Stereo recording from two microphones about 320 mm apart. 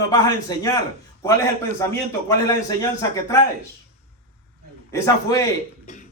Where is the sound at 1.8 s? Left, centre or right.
Centre.